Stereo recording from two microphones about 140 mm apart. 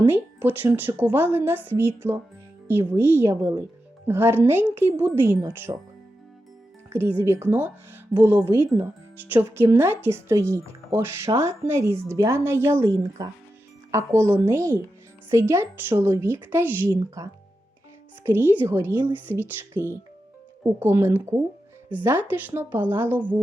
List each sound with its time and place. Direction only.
0.0 s a woman's voice: 15° right (ahead or behind)
6.9 s a woman's voice: 15° right (ahead or behind)
18.3 s speech: 15° right (ahead or behind)